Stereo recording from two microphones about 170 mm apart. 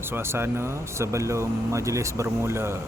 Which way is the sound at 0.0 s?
15° right (ahead or behind).